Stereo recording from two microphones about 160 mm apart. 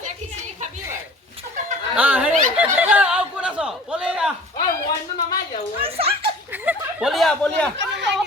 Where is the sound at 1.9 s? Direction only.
10° right (ahead or behind).